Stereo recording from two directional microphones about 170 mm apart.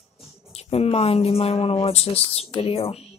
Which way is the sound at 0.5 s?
35° left (ahead or behind).